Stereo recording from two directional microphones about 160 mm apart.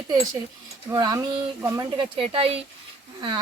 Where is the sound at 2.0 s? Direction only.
35° right (ahead or behind).